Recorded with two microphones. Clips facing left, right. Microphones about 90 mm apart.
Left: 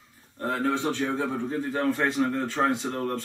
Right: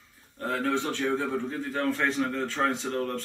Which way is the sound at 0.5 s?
20° left (ahead or behind).